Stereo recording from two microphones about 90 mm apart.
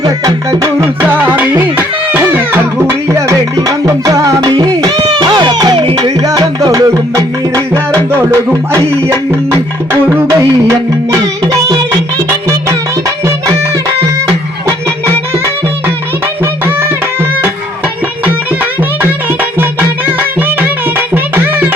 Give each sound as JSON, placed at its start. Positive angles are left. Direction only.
{"t": 0.0, "sound": "music", "side_deg": -50}
{"t": 1.0, "sound": "music", "side_deg": -20}
{"t": 3.1, "sound": "music", "side_deg": -35}
{"t": 4.5, "sound": "music", "side_deg": -55}
{"t": 12.3, "sound": "music", "side_deg": -35}
{"t": 18.3, "sound": "music", "side_deg": -20}
{"t": 21.1, "sound": "music", "side_deg": -25}